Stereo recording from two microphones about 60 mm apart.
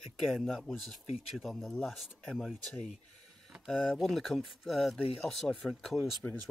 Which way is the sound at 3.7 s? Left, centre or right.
Centre.